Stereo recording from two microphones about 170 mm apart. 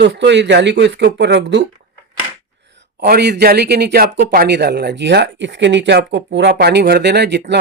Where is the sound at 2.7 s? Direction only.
70° right (ahead or behind).